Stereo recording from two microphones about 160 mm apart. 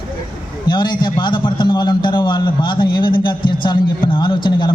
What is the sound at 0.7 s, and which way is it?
A man's voice, 30° left (ahead or behind).